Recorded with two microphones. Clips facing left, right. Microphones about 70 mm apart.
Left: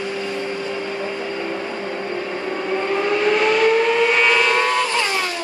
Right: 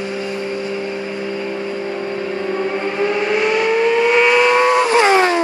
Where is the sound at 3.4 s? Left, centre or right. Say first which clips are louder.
Right 2 dB; centre.